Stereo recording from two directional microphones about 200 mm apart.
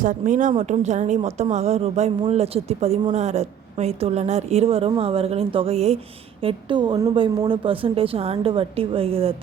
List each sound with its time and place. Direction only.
0.0 s a woman's voice: 40° right (ahead or behind)